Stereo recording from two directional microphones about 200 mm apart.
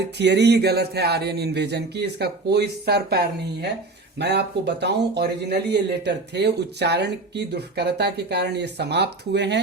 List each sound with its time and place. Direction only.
0.2 s speech: 60° right (ahead or behind)